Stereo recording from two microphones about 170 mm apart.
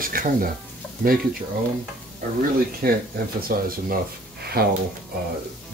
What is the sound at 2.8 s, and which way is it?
Speech, 65° right (ahead or behind).